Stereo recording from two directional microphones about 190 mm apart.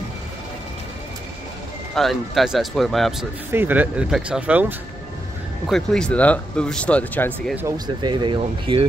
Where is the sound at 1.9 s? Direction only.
Centre (ahead or behind).